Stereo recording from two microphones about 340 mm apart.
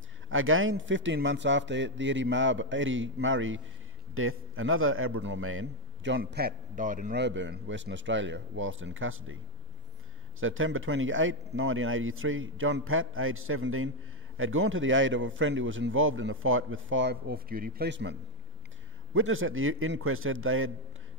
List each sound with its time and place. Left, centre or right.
0.3 s a man's voice: right
10.4 s a man's voice: right
19.1 s a man's voice: right